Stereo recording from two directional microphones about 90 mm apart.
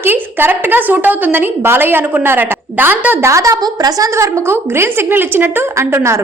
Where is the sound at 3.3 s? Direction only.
35° right (ahead or behind).